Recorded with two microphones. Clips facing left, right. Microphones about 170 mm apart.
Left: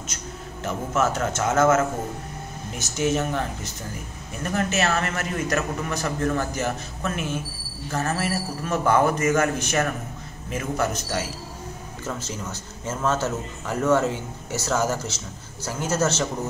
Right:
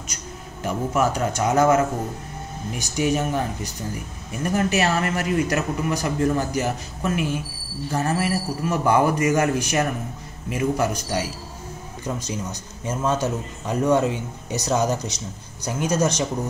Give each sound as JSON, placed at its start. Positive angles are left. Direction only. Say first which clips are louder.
{"t": 0.7, "sound": "a man's voice", "louder": "right 2 dB", "side_deg": -10}
{"t": 2.8, "sound": "a man's voice", "louder": "right 1 dB", "side_deg": -15}